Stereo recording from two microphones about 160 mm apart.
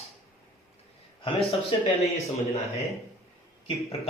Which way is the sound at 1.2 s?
35° left (ahead or behind).